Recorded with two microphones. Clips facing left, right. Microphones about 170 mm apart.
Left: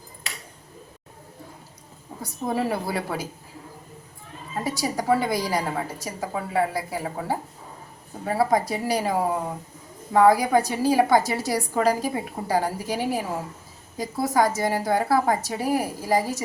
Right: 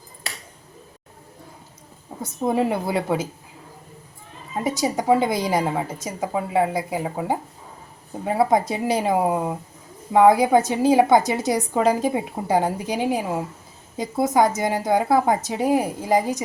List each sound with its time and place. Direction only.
2.2 s a woman's voice: 20° right (ahead or behind)
4.6 s a woman's voice: 20° right (ahead or behind)